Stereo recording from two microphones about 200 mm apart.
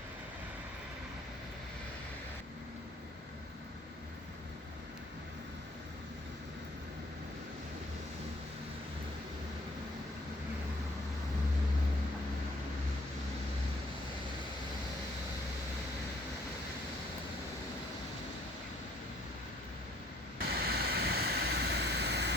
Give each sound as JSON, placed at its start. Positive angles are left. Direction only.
{"t": 20.6, "sound": "vehicle", "side_deg": -50}